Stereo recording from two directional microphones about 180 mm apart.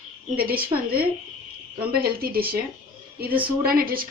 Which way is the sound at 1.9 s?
55° right (ahead or behind).